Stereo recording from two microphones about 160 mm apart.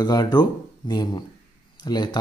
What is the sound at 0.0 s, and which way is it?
Speech, 25° left (ahead or behind).